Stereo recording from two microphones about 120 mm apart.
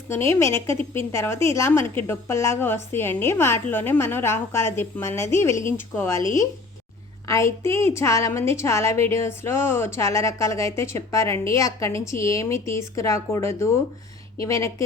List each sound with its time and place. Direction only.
0.1 s a woman's voice: 20° left (ahead or behind)
7.3 s a woman's voice: 25° left (ahead or behind)